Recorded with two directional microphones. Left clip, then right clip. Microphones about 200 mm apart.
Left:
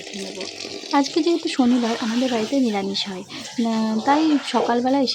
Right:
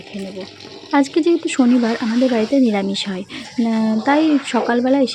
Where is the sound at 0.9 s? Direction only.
15° right (ahead or behind).